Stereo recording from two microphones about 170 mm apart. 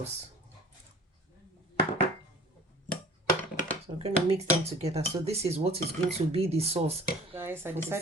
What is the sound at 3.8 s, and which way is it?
Speech, 35° right (ahead or behind).